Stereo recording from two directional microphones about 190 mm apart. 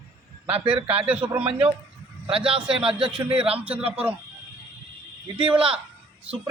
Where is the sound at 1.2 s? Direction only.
30° right (ahead or behind).